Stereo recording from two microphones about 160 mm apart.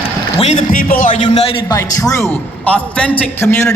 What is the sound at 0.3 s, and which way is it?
Speech, 40° left (ahead or behind).